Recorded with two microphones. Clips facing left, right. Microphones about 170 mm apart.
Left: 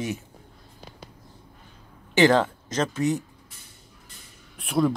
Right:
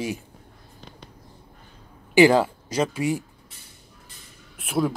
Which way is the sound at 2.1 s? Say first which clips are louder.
Right 3 dB; 10° right (ahead or behind).